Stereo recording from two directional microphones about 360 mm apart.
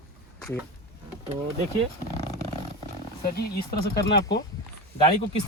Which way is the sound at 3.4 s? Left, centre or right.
Left.